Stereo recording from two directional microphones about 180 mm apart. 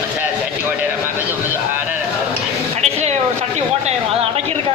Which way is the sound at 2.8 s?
40° right (ahead or behind).